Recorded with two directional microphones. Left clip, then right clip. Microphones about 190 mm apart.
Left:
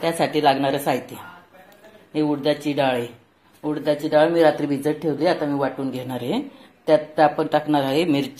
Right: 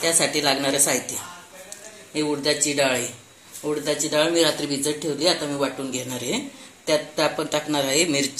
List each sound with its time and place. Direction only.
0.0 s a woman's voice: 45° left (ahead or behind)
2.1 s a woman's voice: 45° left (ahead or behind)